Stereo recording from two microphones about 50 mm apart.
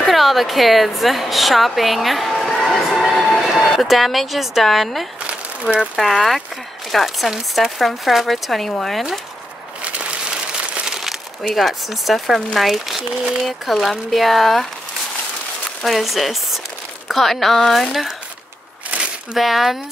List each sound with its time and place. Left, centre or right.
0.0 s a woman's voice: centre
9.8 s a sound: right
10.9 s speech: centre
15.8 s speech: centre
18.9 s a sound: right
19.3 s speech: centre